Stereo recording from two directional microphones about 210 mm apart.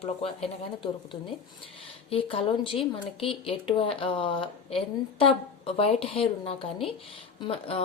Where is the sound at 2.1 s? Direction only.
25° left (ahead or behind).